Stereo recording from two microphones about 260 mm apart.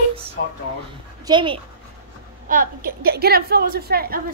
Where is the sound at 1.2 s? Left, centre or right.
Centre.